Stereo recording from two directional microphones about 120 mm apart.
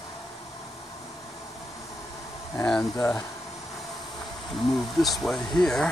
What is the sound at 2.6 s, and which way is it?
Speech, 5° left (ahead or behind).